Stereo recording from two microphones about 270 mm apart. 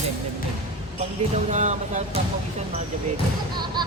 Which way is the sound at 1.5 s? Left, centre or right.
Right.